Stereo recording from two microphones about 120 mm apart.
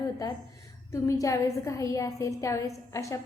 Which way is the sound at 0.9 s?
25° left (ahead or behind).